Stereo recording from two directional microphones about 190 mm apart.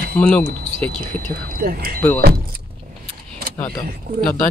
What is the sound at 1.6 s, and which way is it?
Speech, 50° right (ahead or behind).